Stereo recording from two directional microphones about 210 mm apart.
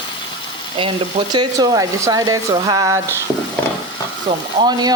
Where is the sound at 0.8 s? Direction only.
20° right (ahead or behind).